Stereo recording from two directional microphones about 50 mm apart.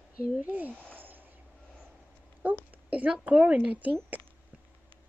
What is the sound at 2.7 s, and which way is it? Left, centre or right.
Speech, right.